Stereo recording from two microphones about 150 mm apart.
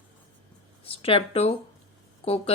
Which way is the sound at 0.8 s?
40° left (ahead or behind).